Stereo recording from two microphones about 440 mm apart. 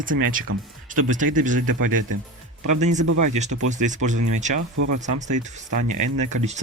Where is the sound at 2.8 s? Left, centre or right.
Centre.